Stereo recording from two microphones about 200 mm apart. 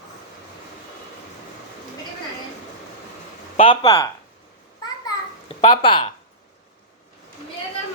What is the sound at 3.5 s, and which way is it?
Speech, 25° left (ahead or behind).